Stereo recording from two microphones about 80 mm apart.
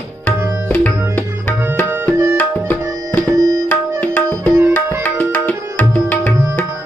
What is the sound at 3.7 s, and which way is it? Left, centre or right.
Tabla, centre.